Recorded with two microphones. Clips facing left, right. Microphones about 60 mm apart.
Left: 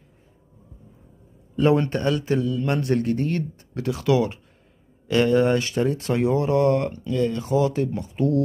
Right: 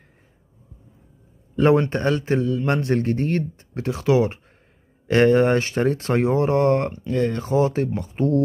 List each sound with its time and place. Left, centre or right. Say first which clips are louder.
1.6 s a man's voice: right 2 dB; right